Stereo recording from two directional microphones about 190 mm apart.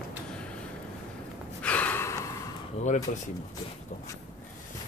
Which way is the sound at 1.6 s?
10° left (ahead or behind).